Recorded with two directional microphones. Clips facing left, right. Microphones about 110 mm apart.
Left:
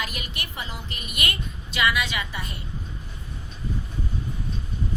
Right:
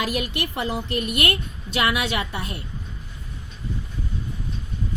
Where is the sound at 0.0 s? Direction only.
65° right (ahead or behind).